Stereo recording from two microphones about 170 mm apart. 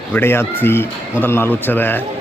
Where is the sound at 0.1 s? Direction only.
15° left (ahead or behind).